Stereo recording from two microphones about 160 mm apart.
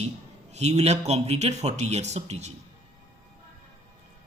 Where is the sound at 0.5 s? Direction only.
45° right (ahead or behind).